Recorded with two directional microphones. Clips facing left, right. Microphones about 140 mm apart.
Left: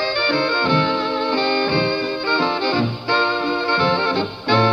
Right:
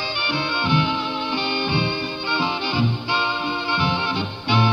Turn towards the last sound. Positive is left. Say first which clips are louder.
# left 4 dB
turn(degrees=-10)  # may be behind; listen again after turning